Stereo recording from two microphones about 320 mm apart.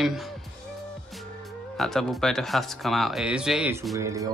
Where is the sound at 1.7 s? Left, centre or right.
Centre.